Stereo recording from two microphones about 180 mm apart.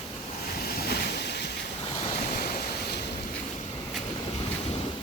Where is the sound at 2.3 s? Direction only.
55° left (ahead or behind).